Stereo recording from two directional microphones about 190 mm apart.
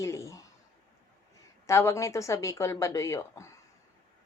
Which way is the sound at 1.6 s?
15° left (ahead or behind).